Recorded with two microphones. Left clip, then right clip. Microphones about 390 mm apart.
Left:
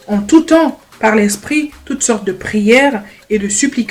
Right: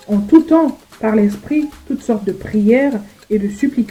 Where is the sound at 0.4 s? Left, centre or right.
Left.